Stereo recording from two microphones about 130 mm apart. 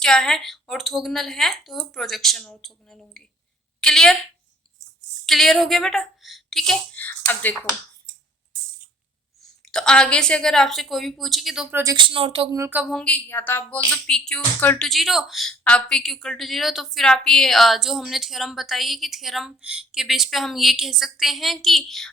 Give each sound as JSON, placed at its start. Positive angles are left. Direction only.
{"t": 0.0, "sound": "a woman's voice", "side_deg": 5}
{"t": 5.2, "sound": "a woman's voice", "side_deg": 0}
{"t": 7.0, "sound": "speech", "side_deg": 15}
{"t": 9.6, "sound": "a woman's voice", "side_deg": 5}
{"t": 11.7, "sound": "speech", "side_deg": -25}
{"t": 11.9, "sound": "speech", "side_deg": -40}
{"t": 12.5, "sound": "speech", "side_deg": -25}
{"t": 12.9, "sound": "speech", "side_deg": 5}
{"t": 14.8, "sound": "a woman's voice", "side_deg": 0}